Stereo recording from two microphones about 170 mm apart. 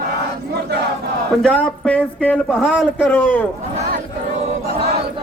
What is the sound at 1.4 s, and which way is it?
Speech, 5° left (ahead or behind).